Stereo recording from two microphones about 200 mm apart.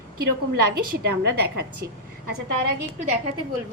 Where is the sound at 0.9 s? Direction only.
50° right (ahead or behind).